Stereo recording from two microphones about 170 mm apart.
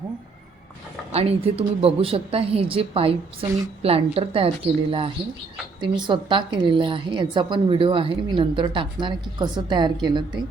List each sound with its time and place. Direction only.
1.1 s a woman's voice: 35° right (ahead or behind)